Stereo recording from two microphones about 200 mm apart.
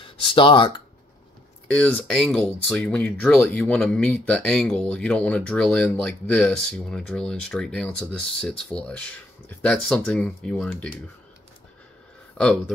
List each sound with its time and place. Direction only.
0.0 s speech: 25° left (ahead or behind)
1.7 s speech: 5° left (ahead or behind)
12.4 s speech: 5° left (ahead or behind)